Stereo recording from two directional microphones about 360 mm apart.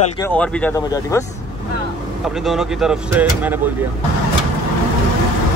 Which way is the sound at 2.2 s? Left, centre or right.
Centre.